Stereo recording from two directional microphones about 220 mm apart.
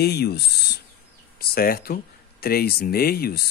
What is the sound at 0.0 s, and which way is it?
Speech, 45° left (ahead or behind).